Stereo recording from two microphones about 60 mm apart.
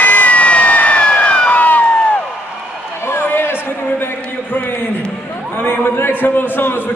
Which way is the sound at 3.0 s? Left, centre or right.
Left.